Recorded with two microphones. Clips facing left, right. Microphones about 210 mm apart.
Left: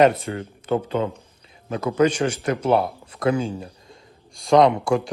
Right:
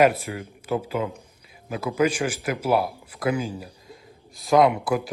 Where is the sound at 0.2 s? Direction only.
30° left (ahead or behind).